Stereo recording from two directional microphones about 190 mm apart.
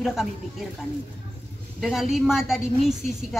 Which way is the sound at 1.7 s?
Centre (ahead or behind).